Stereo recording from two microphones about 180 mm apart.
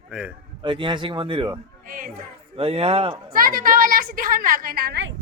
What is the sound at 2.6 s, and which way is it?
Speech, 30° right (ahead or behind).